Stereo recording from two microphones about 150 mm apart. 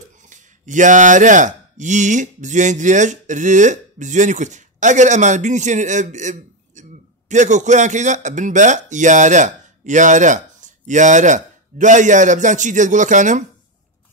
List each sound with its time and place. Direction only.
0.2 s speech: 55° right (ahead or behind)